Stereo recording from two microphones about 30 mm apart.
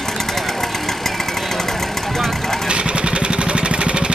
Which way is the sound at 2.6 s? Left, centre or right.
Right.